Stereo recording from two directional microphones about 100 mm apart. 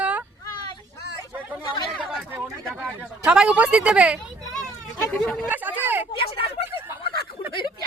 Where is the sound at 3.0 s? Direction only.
10° right (ahead or behind).